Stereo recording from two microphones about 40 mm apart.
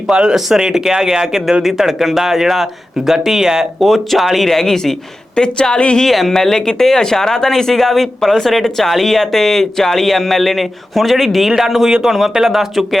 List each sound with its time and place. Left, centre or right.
0.1 s speech: right
0.3 s speech: centre
3.8 s speech: centre; by 6.1 s left
6.1 s speech: centre